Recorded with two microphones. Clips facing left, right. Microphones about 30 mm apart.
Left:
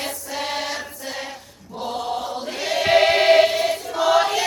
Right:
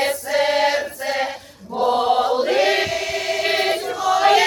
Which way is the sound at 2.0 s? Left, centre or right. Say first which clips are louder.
Right 7 dB; right.